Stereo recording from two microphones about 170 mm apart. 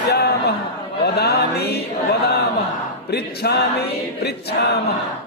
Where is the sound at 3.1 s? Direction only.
70° left (ahead or behind).